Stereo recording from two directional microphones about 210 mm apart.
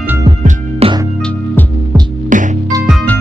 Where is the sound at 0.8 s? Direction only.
30° right (ahead or behind).